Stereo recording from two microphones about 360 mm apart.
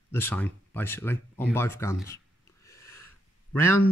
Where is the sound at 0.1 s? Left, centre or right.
Centre.